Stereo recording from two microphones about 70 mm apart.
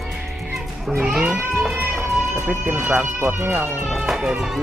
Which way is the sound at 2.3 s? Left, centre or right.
Right.